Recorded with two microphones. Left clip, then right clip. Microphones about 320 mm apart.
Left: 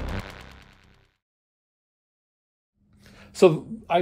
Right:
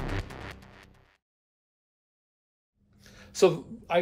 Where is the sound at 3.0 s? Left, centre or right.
Left.